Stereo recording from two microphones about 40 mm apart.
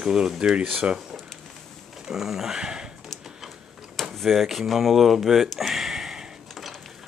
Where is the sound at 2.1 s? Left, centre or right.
Centre.